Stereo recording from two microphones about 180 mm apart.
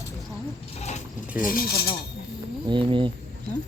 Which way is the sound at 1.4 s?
50° left (ahead or behind).